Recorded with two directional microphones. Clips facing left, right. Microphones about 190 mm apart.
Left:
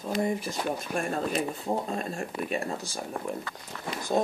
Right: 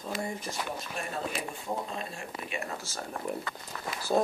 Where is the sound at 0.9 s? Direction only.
50° left (ahead or behind).